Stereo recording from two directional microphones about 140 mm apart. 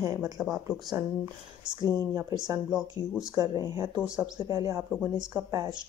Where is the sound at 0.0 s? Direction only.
25° right (ahead or behind).